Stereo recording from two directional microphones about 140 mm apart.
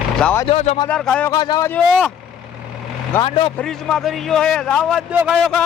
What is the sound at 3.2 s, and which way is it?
Speech, 40° left (ahead or behind).